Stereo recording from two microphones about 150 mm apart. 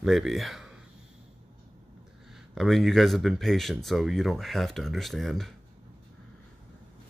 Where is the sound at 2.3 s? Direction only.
Centre (ahead or behind).